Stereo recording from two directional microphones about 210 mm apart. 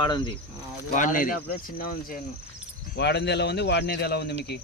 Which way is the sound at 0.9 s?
40° left (ahead or behind).